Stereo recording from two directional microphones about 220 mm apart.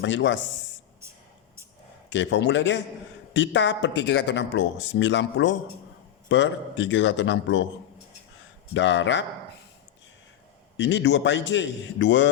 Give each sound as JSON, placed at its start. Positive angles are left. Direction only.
{"t": 0.0, "sound": "speech", "side_deg": 55}
{"t": 2.0, "sound": "speech", "side_deg": 55}
{"t": 8.7, "sound": "speech", "side_deg": 55}
{"t": 10.8, "sound": "speech", "side_deg": 55}